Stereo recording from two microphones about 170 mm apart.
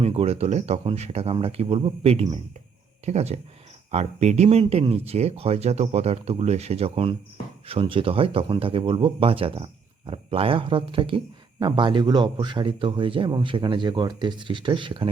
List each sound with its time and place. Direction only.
0.0 s a man's voice: 35° right (ahead or behind)